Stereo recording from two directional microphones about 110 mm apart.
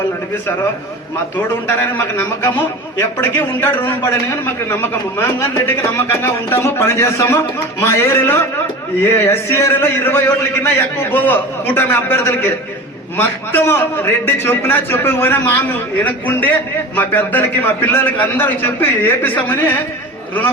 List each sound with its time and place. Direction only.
1.6 s a man's voice: 20° left (ahead or behind)